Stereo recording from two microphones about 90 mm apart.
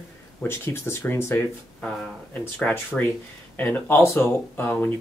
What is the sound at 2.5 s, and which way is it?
Speech, 15° left (ahead or behind).